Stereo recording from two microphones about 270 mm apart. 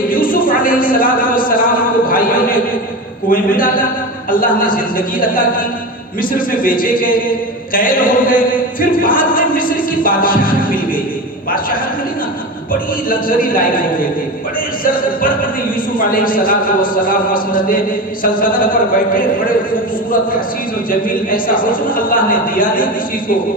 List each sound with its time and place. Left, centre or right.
0.1 s a sound: left
3.2 s chant: left
13.1 s chant: left
16.0 s chant: left
21.2 s chant: left